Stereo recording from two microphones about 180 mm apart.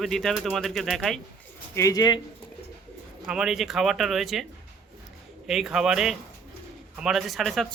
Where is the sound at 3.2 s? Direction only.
5° right (ahead or behind).